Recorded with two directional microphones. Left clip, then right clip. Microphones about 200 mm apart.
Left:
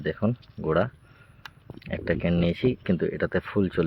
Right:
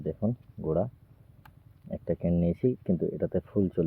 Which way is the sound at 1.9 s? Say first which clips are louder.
Left 4 dB; centre (ahead or behind).